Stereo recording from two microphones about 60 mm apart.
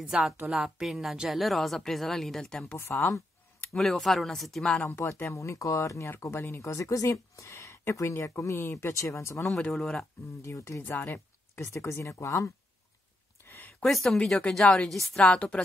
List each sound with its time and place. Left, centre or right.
0.1 s a woman's voice: centre
2.8 s speech: left
3.7 s speech: centre
4.8 s speech: left
6.3 s speech: left
6.7 s speech: left
9.7 s speech: centre
10.4 s speech: left
13.4 s a sound: left
13.8 s a woman's voice: centre
15.1 s a woman's voice: centre